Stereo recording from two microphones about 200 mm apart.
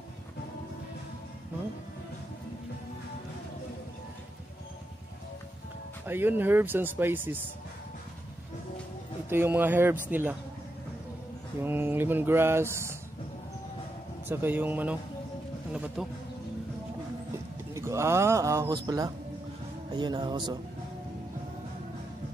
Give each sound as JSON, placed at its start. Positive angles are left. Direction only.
{"t": 6.0, "sound": "speech", "side_deg": -10}
{"t": 9.3, "sound": "speech", "side_deg": -10}
{"t": 11.6, "sound": "speech", "side_deg": -10}
{"t": 14.2, "sound": "speech", "side_deg": -10}
{"t": 17.7, "sound": "speech", "side_deg": -15}